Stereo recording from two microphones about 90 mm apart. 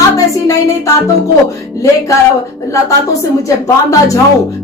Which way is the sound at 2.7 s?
35° left (ahead or behind).